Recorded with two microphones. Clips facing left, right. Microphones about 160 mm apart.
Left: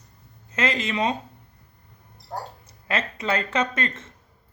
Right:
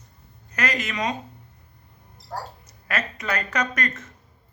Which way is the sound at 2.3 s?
25° left (ahead or behind).